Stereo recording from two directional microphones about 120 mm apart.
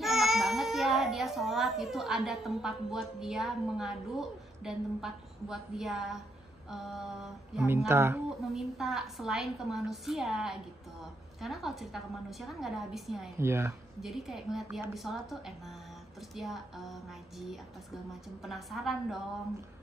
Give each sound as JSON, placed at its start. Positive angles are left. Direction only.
{"t": 0.0, "sound": "a child's voice", "side_deg": 0}
{"t": 7.9, "sound": "a woman's voice", "side_deg": -20}
{"t": 8.5, "sound": "a woman's voice", "side_deg": 0}
{"t": 13.4, "sound": "a woman's voice", "side_deg": -20}
{"t": 14.0, "sound": "a woman's voice", "side_deg": 0}